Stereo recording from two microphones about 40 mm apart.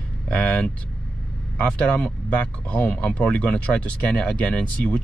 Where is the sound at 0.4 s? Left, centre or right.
Left.